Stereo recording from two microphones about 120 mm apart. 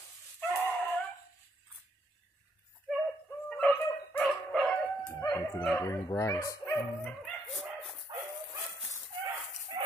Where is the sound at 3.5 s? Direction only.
10° left (ahead or behind).